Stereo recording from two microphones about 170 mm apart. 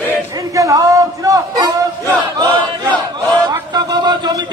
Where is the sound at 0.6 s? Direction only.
20° right (ahead or behind).